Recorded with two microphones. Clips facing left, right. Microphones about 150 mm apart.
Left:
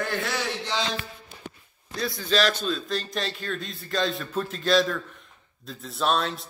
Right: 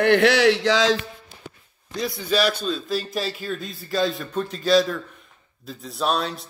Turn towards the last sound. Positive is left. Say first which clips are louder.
# right 1 dB
turn(degrees=0)  # may be behind; listen again after turning